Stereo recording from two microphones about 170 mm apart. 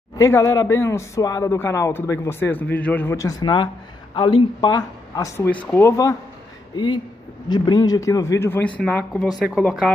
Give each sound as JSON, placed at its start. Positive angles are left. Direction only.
{"t": 0.2, "sound": "speech", "side_deg": 20}
{"t": 7.4, "sound": "speech", "side_deg": 25}
{"t": 9.3, "sound": "speech", "side_deg": -5}